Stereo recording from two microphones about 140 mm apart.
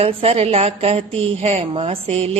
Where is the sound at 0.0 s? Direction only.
45° right (ahead or behind).